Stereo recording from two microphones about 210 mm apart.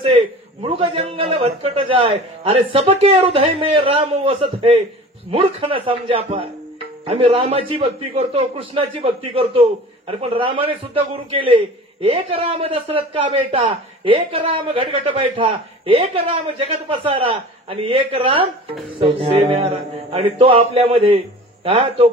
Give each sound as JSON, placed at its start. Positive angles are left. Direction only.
{"t": 0.1, "sound": "a man's voice", "side_deg": -25}